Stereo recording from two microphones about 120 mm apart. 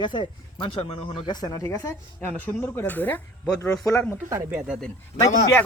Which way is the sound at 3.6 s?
25° left (ahead or behind).